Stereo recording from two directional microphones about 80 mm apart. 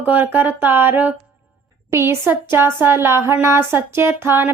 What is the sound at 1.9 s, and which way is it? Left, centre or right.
Speech, right.